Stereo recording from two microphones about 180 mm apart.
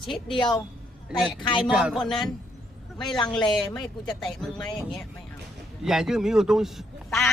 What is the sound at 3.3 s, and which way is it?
A man's voice, 5° left (ahead or behind).